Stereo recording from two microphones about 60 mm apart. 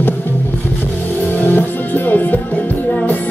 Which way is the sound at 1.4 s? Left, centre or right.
Left.